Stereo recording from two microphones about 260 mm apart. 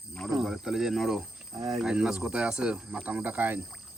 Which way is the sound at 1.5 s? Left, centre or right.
Centre.